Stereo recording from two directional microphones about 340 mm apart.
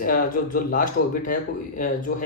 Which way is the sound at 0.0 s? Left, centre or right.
Left.